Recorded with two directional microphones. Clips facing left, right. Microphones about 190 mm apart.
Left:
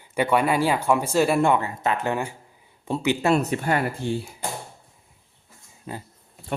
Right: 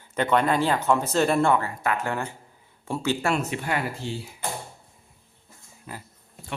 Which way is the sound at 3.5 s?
45° left (ahead or behind).